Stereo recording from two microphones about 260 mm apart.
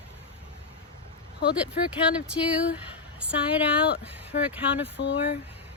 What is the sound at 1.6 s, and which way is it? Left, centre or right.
Speech, centre.